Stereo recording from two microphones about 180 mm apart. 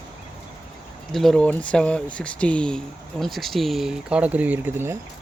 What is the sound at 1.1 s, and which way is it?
Speech, 5° left (ahead or behind).